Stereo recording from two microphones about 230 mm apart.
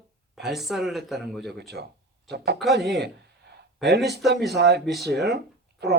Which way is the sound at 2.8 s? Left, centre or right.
Right.